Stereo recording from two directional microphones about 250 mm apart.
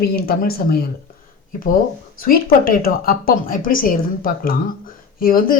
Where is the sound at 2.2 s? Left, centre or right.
Left.